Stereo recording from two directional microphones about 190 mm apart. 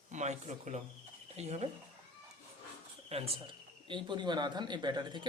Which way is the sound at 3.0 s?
30° right (ahead or behind).